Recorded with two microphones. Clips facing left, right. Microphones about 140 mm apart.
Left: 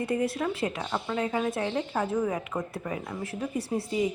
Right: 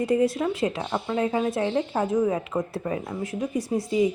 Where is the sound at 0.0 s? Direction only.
20° right (ahead or behind).